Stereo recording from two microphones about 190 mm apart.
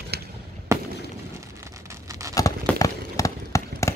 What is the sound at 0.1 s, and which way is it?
Fireworks, 60° right (ahead or behind).